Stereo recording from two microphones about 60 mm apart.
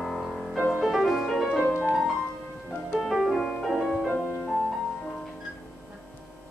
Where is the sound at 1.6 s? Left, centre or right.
Right.